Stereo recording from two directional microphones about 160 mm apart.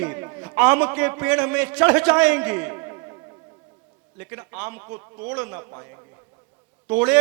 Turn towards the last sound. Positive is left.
turn(degrees=-10)  # may be behind; listen again after turning